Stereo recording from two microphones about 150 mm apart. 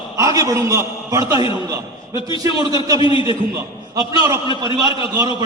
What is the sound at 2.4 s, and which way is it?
Speech, 25° right (ahead or behind).